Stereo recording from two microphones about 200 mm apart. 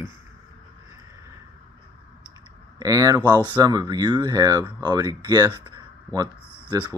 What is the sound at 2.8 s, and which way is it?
Speech, 15° right (ahead or behind).